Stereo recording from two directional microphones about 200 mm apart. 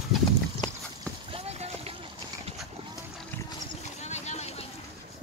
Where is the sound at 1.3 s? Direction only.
30° right (ahead or behind).